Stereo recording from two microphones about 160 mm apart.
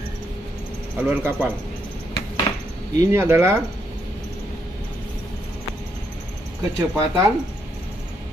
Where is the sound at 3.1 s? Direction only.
15° right (ahead or behind).